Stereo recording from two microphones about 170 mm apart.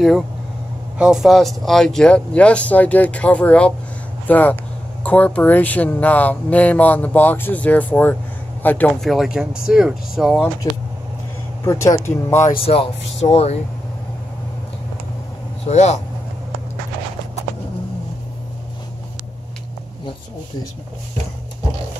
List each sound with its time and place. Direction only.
0.9 s speech: 5° right (ahead or behind)
10.6 s speech: 20° left (ahead or behind)
12.5 s speech: 35° left (ahead or behind)
15.6 s speech: 40° left (ahead or behind)